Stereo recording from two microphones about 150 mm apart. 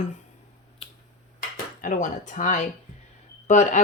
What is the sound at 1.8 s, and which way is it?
Speech, 55° left (ahead or behind).